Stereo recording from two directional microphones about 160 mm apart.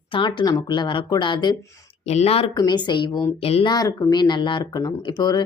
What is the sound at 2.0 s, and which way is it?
Speech, 40° left (ahead or behind).